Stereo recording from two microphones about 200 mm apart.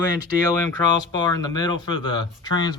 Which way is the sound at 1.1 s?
20° left (ahead or behind).